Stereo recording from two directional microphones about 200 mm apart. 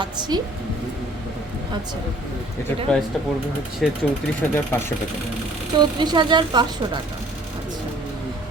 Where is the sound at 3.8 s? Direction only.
Centre (ahead or behind).